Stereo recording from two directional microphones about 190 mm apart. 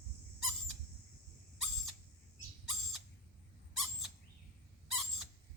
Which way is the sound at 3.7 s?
Centre (ahead or behind).